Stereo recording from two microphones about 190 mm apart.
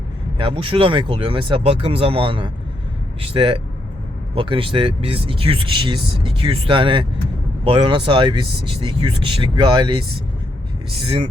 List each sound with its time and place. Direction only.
0.3 s speech: 25° right (ahead or behind)
11.0 s speech: 25° right (ahead or behind)